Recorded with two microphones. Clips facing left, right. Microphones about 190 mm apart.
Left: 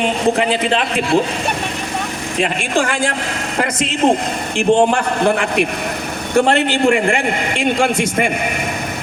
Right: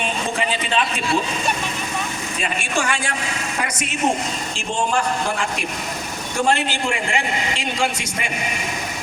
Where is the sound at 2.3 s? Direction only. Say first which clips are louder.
Left 8 dB; 60° left (ahead or behind).